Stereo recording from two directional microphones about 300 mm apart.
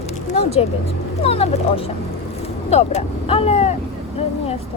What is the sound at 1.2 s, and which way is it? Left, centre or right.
Speech, centre.